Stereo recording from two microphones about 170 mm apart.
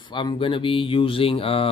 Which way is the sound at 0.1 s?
30° left (ahead or behind).